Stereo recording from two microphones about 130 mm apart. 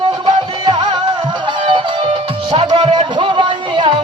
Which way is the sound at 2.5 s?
40° right (ahead or behind).